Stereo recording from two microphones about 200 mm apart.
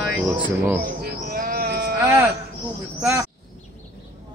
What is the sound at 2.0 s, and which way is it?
Speech, 10° right (ahead or behind).